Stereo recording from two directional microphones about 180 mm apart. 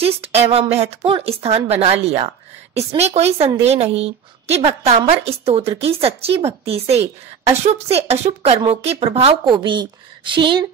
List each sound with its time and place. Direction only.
0.0 s speech: 35° right (ahead or behind)